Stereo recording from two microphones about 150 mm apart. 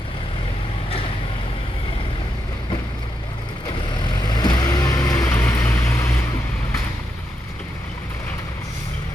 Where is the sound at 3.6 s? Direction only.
30° left (ahead or behind).